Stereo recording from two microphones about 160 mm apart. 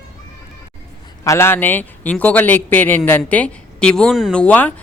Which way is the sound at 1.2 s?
15° left (ahead or behind).